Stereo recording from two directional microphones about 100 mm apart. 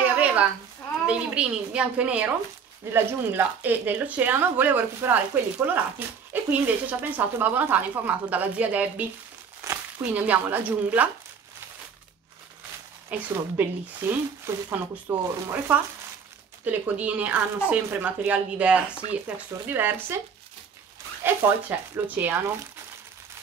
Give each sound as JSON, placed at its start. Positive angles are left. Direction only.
{"t": 0.0, "sound": "a sound", "side_deg": -15}
{"t": 1.0, "sound": "speech", "side_deg": -10}
{"t": 13.1, "sound": "speech", "side_deg": -20}
{"t": 21.2, "sound": "speech", "side_deg": -20}